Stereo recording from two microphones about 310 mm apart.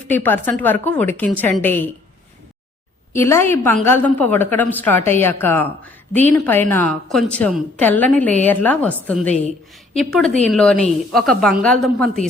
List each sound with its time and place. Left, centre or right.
0.1 s a woman's voice: centre
3.1 s a woman's voice: centre